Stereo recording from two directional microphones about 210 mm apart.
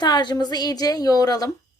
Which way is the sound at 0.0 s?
20° left (ahead or behind).